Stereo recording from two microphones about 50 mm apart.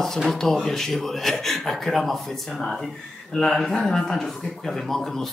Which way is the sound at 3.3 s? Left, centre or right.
Left.